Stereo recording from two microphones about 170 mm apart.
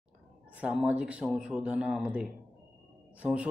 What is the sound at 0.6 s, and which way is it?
Speech, 5° right (ahead or behind).